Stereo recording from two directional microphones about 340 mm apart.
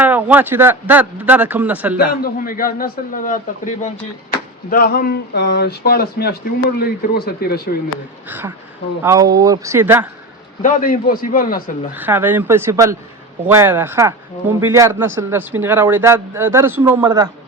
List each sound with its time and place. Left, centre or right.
0.0 s speech: centre
2.0 s a man's voice: left
7.9 s speech: centre
10.6 s a man's voice: left
11.9 s speech: centre